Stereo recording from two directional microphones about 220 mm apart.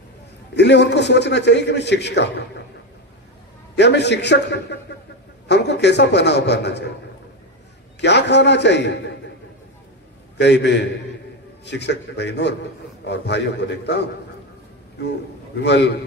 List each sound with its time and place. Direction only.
0.6 s a man's voice: 50° left (ahead or behind)
3.7 s a man's voice: 50° left (ahead or behind)
8.0 s a man's voice: 50° left (ahead or behind)
10.3 s a man's voice: 50° left (ahead or behind)